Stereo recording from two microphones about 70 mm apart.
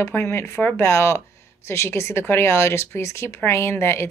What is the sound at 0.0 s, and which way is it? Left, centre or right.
A woman's voice, left.